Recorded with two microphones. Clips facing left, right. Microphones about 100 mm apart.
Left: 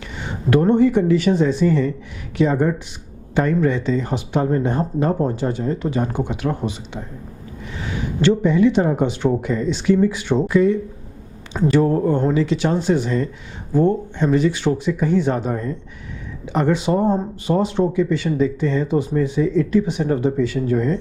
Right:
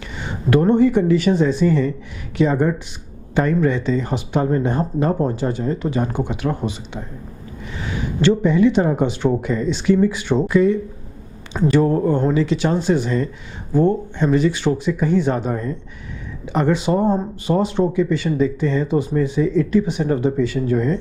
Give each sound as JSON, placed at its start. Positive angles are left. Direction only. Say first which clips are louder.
{"t": 0.5, "sound": "speech", "louder": "even", "side_deg": -15}
{"t": 8.2, "sound": "speech", "louder": "even", "side_deg": -15}